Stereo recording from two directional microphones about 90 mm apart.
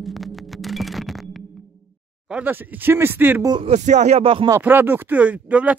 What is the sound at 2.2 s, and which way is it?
Speech, 10° right (ahead or behind).